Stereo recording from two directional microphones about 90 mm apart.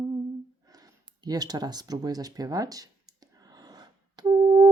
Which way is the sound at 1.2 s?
45° right (ahead or behind).